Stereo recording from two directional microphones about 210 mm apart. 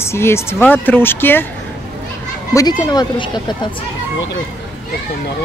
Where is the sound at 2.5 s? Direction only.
15° left (ahead or behind).